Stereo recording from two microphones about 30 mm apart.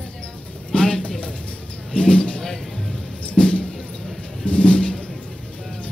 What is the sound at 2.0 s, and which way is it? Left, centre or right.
Speech, left.